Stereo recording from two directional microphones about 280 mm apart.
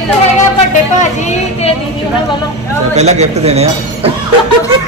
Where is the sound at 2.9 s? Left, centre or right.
Right.